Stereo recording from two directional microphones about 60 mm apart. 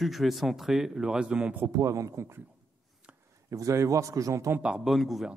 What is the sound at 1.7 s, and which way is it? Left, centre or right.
Speech, right.